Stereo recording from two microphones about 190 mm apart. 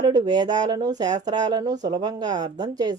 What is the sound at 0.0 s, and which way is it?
Speech, 20° right (ahead or behind).